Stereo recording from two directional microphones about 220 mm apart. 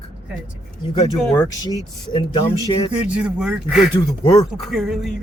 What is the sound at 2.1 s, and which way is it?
Speech, 25° left (ahead or behind).